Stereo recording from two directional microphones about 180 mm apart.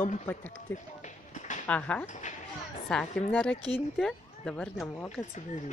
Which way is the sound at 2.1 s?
40° left (ahead or behind).